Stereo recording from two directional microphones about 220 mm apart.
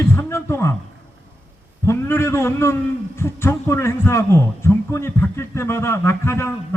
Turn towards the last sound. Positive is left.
turn(degrees=10)  # may be behind; listen again after turning